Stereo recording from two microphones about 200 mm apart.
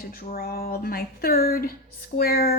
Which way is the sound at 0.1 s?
45° left (ahead or behind).